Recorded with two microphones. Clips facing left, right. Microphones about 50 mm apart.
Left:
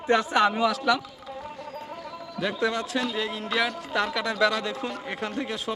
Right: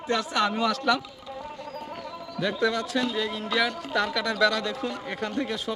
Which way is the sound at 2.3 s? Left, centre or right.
Centre.